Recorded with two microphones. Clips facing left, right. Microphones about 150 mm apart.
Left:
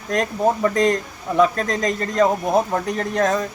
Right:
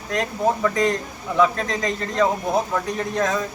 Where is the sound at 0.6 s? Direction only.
45° left (ahead or behind).